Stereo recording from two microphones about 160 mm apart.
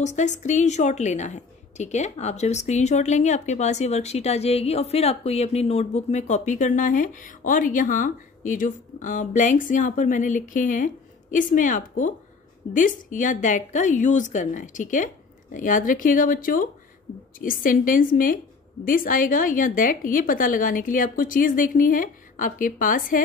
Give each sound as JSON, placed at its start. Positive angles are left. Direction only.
{"t": 0.0, "sound": "a woman's voice", "side_deg": 50}